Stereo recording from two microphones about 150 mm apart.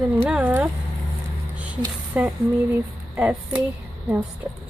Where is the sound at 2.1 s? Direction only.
10° right (ahead or behind).